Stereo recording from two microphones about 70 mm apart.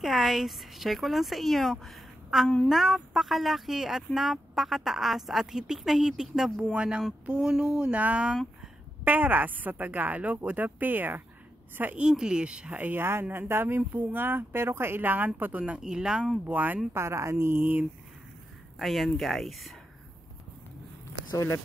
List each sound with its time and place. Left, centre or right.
0.0 s speech: centre; by 12.0 s right
12.0 s speech: centre
13.0 s speech: right; by 16.3 s centre
16.4 s speech: right
16.9 s speech: right
18.8 s speech: centre